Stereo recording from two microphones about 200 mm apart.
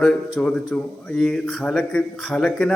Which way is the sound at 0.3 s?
5° left (ahead or behind).